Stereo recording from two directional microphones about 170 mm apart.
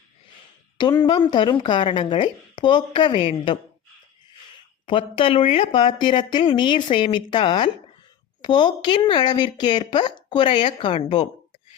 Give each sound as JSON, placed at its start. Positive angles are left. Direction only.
{"t": 1.0, "sound": "speech", "side_deg": 25}
{"t": 4.9, "sound": "speech", "side_deg": 30}